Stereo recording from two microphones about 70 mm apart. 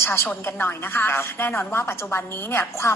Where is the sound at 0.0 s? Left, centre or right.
Left.